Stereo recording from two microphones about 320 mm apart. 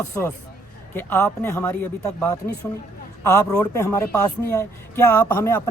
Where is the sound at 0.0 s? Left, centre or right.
Centre.